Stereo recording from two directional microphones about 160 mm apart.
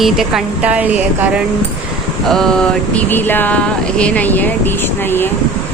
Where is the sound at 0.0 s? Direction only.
Centre (ahead or behind).